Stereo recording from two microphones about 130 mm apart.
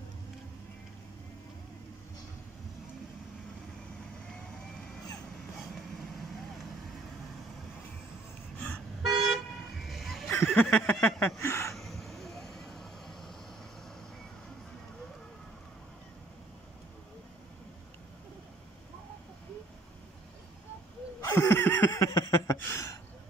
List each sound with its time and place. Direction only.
8.5 s toot: 10° left (ahead or behind)
9.8 s music: centre (ahead or behind)
10.5 s a sound: 15° left (ahead or behind)
11.7 s vehicle: centre (ahead or behind)
21.2 s a sound: 20° left (ahead or behind)
22.6 s speech: 20° left (ahead or behind)